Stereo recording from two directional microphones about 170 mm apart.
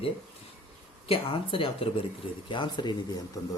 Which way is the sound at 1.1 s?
30° left (ahead or behind).